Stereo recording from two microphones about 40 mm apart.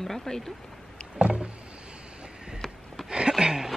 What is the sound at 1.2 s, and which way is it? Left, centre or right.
Vehicle, right.